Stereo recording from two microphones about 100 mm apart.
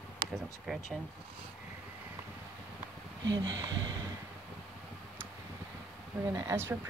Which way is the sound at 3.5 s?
35° right (ahead or behind).